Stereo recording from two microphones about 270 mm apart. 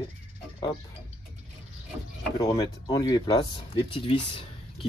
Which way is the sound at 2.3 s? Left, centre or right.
Centre.